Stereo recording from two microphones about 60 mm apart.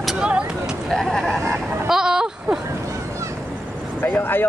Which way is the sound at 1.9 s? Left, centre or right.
Centre.